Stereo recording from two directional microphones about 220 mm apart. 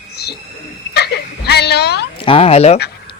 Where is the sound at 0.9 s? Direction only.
50° left (ahead or behind).